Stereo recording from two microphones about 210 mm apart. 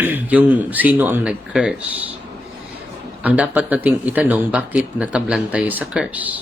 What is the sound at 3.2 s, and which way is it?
Speech, 5° right (ahead or behind).